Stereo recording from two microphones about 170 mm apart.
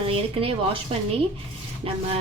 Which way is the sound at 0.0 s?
35° right (ahead or behind).